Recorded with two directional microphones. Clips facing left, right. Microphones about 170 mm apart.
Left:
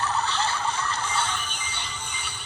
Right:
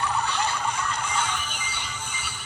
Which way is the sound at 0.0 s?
15° right (ahead or behind).